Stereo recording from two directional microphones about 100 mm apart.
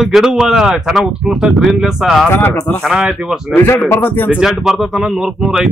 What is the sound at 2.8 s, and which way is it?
Speech, 5° right (ahead or behind).